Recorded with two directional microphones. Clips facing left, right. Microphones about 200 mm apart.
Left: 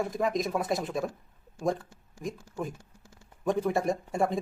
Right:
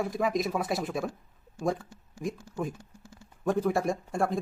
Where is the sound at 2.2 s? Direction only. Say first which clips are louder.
Right 2 dB; centre (ahead or behind).